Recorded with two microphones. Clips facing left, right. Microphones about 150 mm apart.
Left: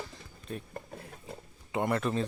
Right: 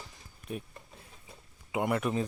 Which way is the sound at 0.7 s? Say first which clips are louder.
Left 9 dB; 55° left (ahead or behind).